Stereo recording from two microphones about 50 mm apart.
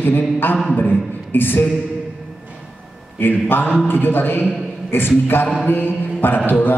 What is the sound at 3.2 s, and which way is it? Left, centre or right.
A man's voice, left.